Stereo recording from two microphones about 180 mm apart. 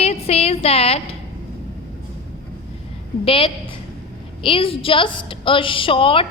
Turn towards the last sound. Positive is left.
turn(degrees=30)  # may be behind; listen again after turning